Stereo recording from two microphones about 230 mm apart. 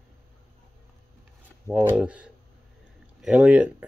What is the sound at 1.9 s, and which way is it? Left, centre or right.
Speech, centre.